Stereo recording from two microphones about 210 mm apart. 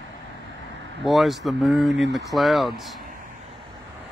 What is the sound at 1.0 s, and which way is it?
Speech, centre (ahead or behind).